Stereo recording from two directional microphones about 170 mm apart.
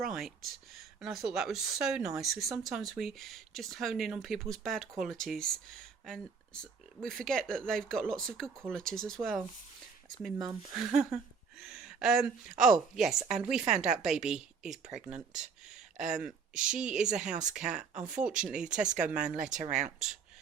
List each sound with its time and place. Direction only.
0.0 s speech: centre (ahead or behind)
10.3 s speech: 20° right (ahead or behind)
10.8 s speech: 5° right (ahead or behind)
16.6 s speech: 5° right (ahead or behind)
19.4 s speech: 45° right (ahead or behind)
19.7 s speech: 5° right (ahead or behind)